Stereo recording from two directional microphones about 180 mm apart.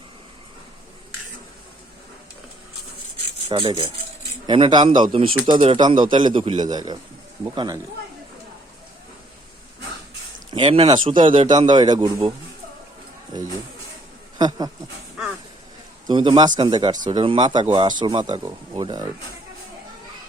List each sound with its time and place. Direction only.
3.5 s a man's voice: 30° right (ahead or behind)
10.5 s a man's voice: 30° right (ahead or behind)
14.3 s speech: 25° right (ahead or behind)
16.0 s a man's voice: 25° right (ahead or behind)